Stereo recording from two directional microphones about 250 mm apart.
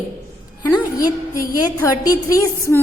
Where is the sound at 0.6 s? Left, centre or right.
Centre.